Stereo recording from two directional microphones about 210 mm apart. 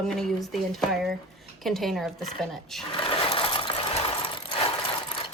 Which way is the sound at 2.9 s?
25° left (ahead or behind).